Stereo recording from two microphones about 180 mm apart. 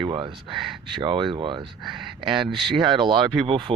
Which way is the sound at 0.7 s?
Centre (ahead or behind).